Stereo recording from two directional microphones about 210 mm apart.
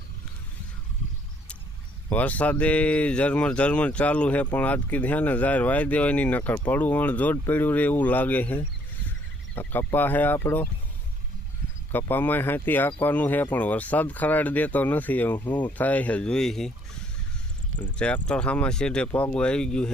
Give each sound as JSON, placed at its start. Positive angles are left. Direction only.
{"t": 2.0, "sound": "speech", "side_deg": 5}
{"t": 11.9, "sound": "speech", "side_deg": 10}
{"t": 17.9, "sound": "speech", "side_deg": 5}